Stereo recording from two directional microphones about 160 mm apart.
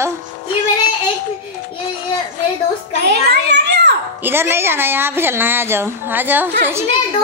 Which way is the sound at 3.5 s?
90° right.